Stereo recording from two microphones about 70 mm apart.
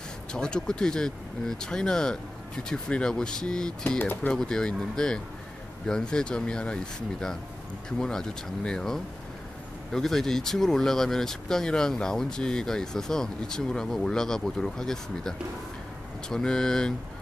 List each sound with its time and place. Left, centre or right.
0.3 s speech: centre
4.0 s speech: left
4.3 s speech: centre